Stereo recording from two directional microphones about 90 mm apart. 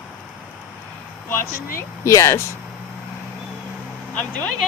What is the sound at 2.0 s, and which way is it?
Speech, 30° left (ahead or behind).